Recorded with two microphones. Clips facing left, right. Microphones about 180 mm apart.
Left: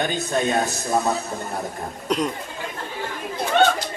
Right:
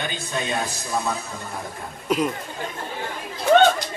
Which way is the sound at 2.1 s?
5° right (ahead or behind).